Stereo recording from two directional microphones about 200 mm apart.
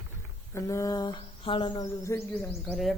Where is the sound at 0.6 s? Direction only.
15° left (ahead or behind).